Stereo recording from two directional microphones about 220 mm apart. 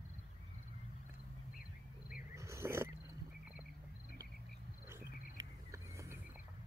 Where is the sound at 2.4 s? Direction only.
15° right (ahead or behind).